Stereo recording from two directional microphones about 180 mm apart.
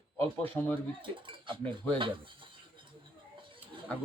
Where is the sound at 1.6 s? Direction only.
5° left (ahead or behind).